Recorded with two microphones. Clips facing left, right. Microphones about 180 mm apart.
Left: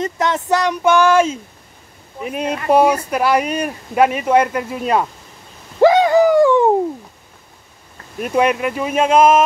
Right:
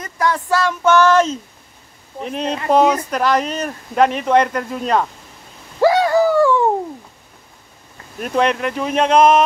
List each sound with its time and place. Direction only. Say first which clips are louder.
0.0 s speech: left 1 dB; 20° left (ahead or behind); by 5.0 s 5° left (ahead or behind)
5.8 s bird: left 3 dB; 20° left (ahead or behind)
8.2 s speech: left 2 dB; 10° left (ahead or behind)